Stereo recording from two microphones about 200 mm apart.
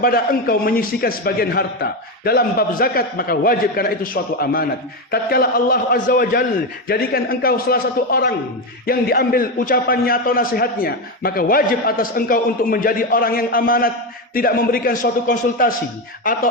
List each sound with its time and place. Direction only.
0.0 s a man's voice: 45° left (ahead or behind)